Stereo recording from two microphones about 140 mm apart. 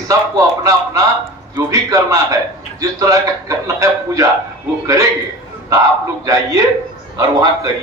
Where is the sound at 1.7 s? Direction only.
25° right (ahead or behind).